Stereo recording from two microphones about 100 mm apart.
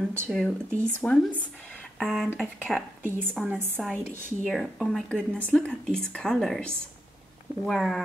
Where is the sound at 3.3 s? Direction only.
5° right (ahead or behind).